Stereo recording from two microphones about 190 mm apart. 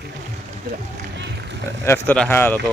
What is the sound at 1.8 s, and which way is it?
Speech, 10° left (ahead or behind).